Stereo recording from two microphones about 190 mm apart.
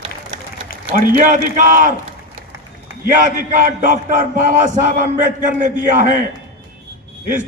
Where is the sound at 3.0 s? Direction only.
45° right (ahead or behind).